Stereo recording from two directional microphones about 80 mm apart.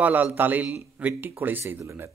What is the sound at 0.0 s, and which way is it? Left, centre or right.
A man's voice, right.